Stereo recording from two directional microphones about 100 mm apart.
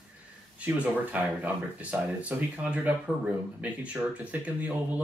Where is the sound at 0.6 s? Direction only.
15° right (ahead or behind).